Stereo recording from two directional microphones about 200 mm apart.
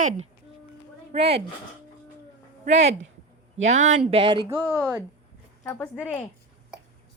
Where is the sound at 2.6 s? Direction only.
35° right (ahead or behind).